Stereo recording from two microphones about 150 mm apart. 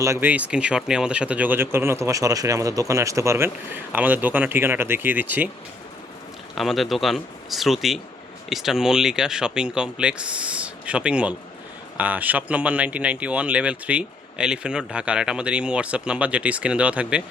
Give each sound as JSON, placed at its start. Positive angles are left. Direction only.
{"t": 0.0, "sound": "speech", "side_deg": -15}
{"t": 6.6, "sound": "speech", "side_deg": 0}